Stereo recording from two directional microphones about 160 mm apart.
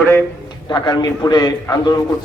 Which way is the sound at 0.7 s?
25° left (ahead or behind).